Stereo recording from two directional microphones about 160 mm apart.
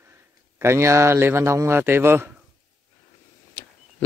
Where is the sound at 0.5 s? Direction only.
15° right (ahead or behind).